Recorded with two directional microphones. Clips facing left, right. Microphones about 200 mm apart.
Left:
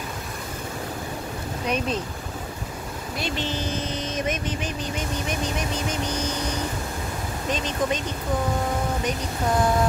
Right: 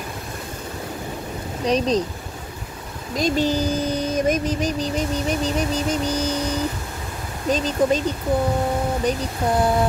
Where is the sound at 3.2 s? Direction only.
40° right (ahead or behind).